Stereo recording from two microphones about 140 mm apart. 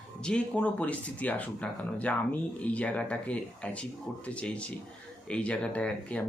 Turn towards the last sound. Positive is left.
turn(degrees=10)  # may be behind; listen again after turning